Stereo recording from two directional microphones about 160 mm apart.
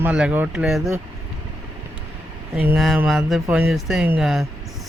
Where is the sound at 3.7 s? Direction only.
5° right (ahead or behind).